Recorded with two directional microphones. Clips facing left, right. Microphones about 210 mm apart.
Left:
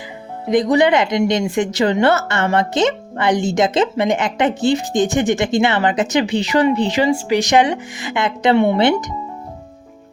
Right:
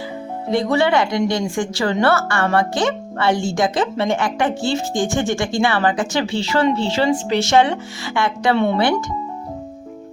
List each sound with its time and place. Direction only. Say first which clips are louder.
0.5 s a woman's voice: left 3 dB; 15° left (ahead or behind)